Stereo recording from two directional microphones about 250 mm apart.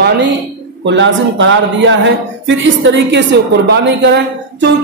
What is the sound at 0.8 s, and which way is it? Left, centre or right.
A woman's voice, right.